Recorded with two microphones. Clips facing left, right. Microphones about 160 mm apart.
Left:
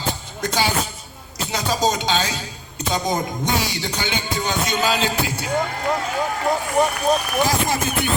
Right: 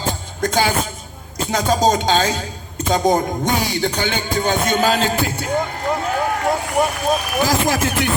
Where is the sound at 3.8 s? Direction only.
50° right (ahead or behind).